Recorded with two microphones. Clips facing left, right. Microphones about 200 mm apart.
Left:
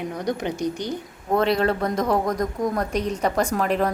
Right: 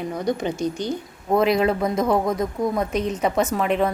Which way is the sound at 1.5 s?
5° right (ahead or behind).